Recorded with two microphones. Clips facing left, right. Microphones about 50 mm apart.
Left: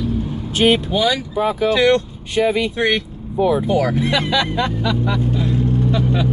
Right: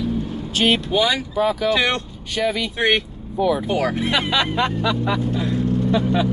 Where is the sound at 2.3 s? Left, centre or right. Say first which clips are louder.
Left 5 dB; centre.